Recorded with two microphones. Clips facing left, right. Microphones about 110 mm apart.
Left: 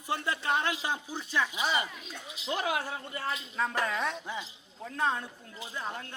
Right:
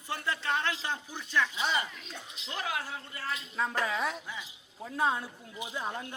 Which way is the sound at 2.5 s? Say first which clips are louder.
Left 3 dB; 20° left (ahead or behind).